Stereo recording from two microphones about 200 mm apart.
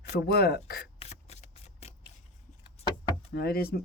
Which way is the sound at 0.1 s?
55° left (ahead or behind).